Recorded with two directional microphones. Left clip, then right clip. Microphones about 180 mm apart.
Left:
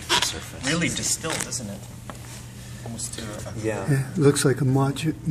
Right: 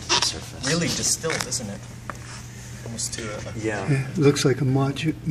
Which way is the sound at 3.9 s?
10° left (ahead or behind).